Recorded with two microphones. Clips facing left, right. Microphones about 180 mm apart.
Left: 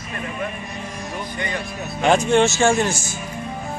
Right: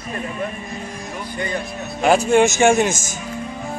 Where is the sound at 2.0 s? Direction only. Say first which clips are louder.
Right 2 dB; 5° right (ahead or behind).